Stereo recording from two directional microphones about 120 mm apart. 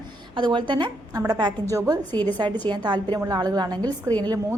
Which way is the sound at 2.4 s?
40° right (ahead or behind).